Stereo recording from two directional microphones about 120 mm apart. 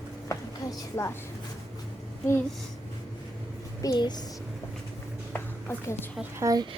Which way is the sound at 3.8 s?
35° left (ahead or behind).